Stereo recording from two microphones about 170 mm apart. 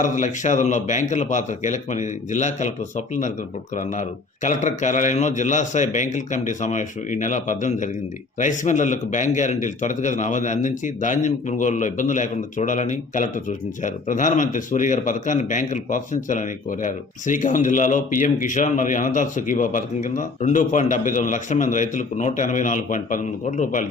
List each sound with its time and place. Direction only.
0.0 s a man's voice: 45° left (ahead or behind)
4.4 s a man's voice: 45° left (ahead or behind)